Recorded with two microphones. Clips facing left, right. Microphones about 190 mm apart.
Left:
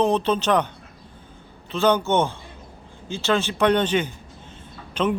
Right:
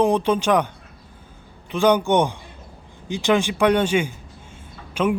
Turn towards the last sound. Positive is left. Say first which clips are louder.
# right 2 dB
turn(degrees=-10)  # may be behind; listen again after turning